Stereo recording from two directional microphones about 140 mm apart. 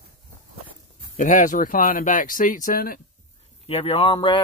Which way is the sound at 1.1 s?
65° left (ahead or behind).